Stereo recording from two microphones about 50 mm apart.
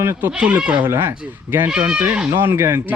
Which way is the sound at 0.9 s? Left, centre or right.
Right.